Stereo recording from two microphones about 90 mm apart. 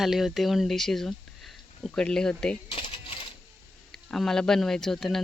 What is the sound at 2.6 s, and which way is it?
Coin, 90° left.